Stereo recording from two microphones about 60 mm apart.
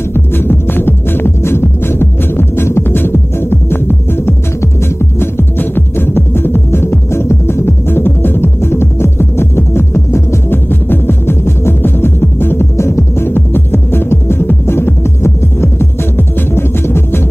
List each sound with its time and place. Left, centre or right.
0.1 s music: left